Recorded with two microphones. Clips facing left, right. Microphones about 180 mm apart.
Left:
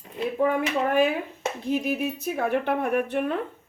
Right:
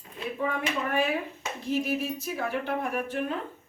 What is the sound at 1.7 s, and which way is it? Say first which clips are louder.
Speech: left 2 dB; 60° left (ahead or behind).